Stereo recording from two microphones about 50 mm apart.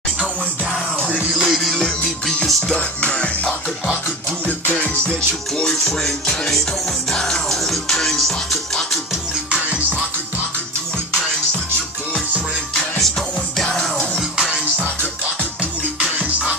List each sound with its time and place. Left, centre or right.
1.4 s music: centre
1.8 s music: centre
3.0 s music: left
5.6 s music: centre
13.7 s music: centre
16.0 s music: right